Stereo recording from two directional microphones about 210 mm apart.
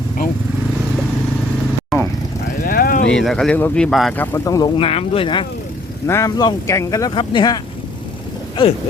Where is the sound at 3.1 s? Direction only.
5° left (ahead or behind); by 7.6 s 20° left (ahead or behind).